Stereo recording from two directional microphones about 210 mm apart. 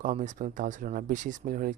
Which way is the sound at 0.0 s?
35° right (ahead or behind).